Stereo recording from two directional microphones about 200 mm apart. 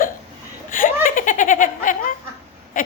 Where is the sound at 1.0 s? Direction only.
40° left (ahead or behind).